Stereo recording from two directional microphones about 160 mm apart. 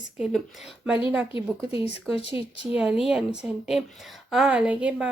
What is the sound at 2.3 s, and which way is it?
A woman's voice, 5° right (ahead or behind).